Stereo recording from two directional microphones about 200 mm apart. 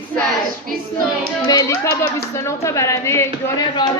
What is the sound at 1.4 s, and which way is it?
Speech, 15° left (ahead or behind).